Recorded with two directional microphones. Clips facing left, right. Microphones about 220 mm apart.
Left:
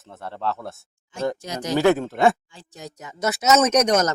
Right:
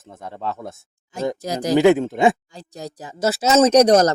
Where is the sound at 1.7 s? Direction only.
15° right (ahead or behind).